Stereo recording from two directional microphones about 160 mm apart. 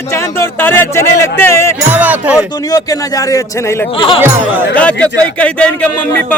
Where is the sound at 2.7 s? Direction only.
20° left (ahead or behind).